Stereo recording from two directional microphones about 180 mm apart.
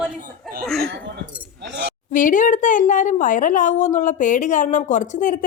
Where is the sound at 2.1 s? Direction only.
45° left (ahead or behind).